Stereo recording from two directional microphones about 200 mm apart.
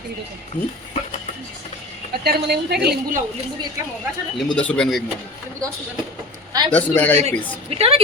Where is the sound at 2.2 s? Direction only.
55° right (ahead or behind).